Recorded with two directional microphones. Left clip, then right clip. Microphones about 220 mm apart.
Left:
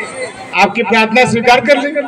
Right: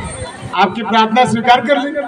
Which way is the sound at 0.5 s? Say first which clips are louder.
Left 2 dB; 35° left (ahead or behind).